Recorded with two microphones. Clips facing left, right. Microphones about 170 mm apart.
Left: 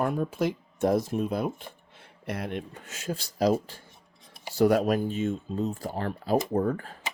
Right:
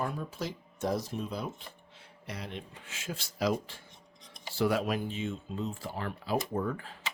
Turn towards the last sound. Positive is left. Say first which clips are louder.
# left 7 dB
turn(degrees=45)  # may be behind; listen again after turning